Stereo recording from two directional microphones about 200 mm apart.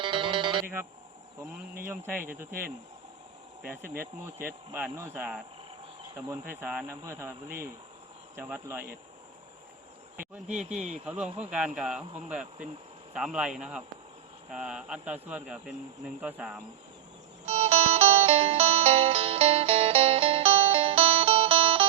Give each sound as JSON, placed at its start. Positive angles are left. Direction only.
{"t": 0.0, "sound": "music", "side_deg": -25}
{"t": 1.8, "sound": "speech", "side_deg": -10}
{"t": 3.7, "sound": "speech", "side_deg": -10}
{"t": 10.5, "sound": "speech", "side_deg": -35}
{"t": 11.0, "sound": "speech", "side_deg": -5}
{"t": 17.4, "sound": "music", "side_deg": -30}